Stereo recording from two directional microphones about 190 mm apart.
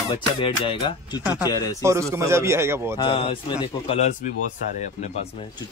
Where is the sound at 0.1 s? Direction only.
25° left (ahead or behind).